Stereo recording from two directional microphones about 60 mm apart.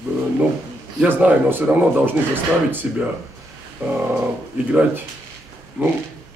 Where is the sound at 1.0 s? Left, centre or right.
Right.